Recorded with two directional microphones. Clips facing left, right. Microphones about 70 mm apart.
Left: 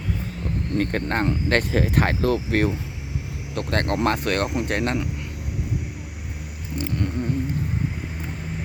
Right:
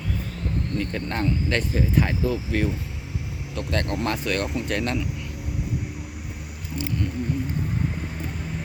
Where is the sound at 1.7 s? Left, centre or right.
Left.